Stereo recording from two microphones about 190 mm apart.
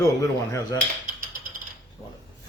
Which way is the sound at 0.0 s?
15° left (ahead or behind).